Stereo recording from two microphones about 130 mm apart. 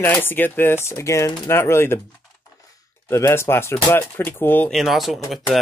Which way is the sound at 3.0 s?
20° left (ahead or behind).